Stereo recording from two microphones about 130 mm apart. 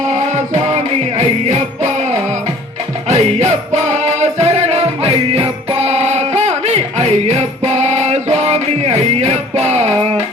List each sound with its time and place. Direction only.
0.1 s music: 65° right (ahead or behind)
3.1 s music: 55° right (ahead or behind)